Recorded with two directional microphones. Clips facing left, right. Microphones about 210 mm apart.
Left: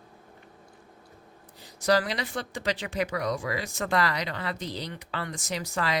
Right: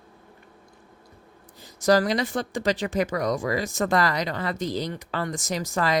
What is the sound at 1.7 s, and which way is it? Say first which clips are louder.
Speech: right 5 dB; 45° right (ahead or behind).